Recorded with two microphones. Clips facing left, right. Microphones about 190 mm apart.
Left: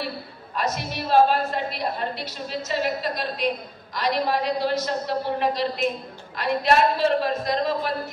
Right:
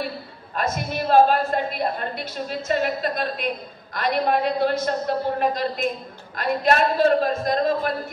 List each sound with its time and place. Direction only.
0.6 s a woman's voice: 50° right (ahead or behind)